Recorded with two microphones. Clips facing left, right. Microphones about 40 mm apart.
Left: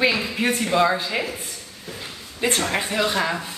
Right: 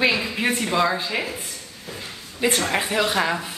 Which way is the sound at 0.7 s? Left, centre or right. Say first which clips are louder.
Left 4 dB; centre.